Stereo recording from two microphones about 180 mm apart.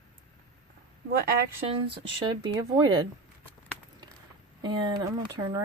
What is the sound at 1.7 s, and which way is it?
Speech, 25° right (ahead or behind).